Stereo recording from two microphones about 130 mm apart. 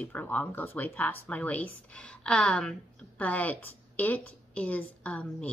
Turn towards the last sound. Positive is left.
turn(degrees=10)  # may be behind; listen again after turning